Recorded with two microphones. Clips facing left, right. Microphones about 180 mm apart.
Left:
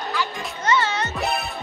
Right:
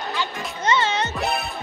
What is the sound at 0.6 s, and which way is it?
Music, 20° right (ahead or behind).